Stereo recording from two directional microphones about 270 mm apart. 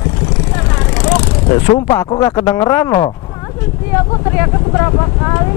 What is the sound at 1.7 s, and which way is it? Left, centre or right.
Speech, centre.